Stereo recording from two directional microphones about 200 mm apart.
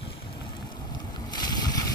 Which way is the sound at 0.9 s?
20° left (ahead or behind).